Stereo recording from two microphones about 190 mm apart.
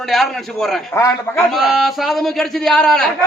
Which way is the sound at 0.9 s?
15° left (ahead or behind).